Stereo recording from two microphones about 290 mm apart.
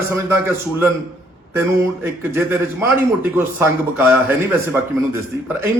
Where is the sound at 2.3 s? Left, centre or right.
Centre.